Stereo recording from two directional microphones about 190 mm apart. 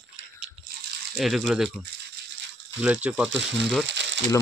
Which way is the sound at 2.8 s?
5° right (ahead or behind).